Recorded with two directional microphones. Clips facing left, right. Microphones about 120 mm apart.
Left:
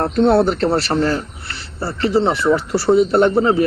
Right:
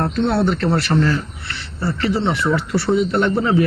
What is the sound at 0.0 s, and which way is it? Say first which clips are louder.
A man's voice: left 4 dB; 35° left (ahead or behind).